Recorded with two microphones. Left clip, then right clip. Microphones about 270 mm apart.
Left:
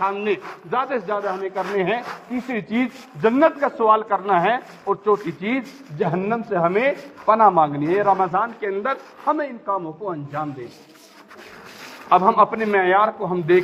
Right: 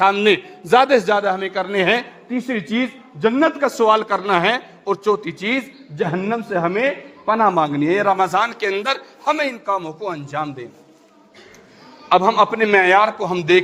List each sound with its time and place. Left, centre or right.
0.0 s a man's voice: right
2.3 s a man's voice: right
12.0 s a man's voice: right